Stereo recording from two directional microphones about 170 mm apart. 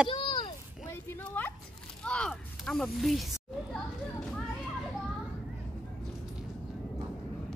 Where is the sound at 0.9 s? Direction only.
10° left (ahead or behind).